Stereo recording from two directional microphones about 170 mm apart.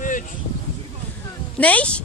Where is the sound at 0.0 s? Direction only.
50° left (ahead or behind).